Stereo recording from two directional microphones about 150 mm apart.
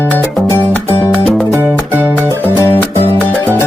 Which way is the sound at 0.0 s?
15° left (ahead or behind).